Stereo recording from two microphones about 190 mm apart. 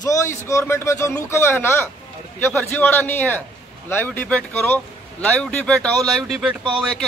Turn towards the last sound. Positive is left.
turn(degrees=-5)  # may be behind; listen again after turning